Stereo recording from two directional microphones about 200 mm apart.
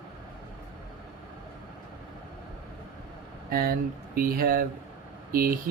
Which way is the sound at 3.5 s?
50° right (ahead or behind).